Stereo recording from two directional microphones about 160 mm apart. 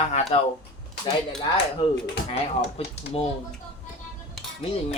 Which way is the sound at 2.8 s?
40° left (ahead or behind).